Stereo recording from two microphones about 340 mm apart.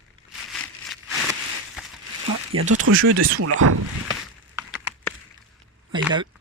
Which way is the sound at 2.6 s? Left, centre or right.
Right.